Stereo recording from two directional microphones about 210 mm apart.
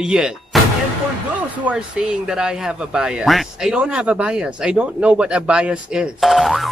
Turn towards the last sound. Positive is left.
turn(degrees=0)  # may be behind; listen again after turning